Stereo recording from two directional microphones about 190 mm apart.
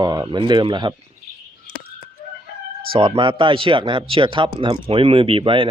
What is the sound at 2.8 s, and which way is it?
Speech, 30° right (ahead or behind).